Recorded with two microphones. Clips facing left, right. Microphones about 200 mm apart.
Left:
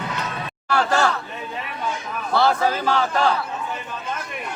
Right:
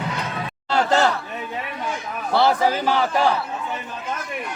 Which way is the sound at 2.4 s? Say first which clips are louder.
Right 1 dB; 15° right (ahead or behind).